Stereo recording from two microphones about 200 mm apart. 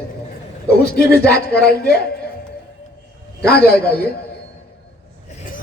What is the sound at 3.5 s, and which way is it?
Speech, 50° left (ahead or behind).